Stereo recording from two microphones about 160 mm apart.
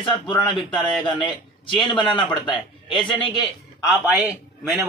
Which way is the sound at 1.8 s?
30° left (ahead or behind).